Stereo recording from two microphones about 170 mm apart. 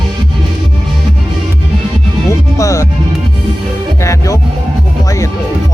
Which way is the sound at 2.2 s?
15° left (ahead or behind).